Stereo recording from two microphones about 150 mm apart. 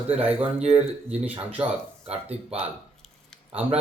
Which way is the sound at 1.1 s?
10° right (ahead or behind).